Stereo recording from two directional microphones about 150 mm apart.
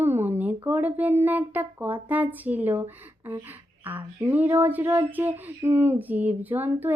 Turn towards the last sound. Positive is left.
turn(degrees=-10)  # may be behind; listen again after turning